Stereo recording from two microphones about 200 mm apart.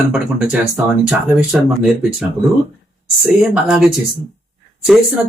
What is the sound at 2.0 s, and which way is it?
Speech, centre (ahead or behind).